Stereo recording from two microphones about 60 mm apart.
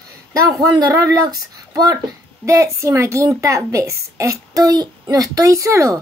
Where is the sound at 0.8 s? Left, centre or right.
Right.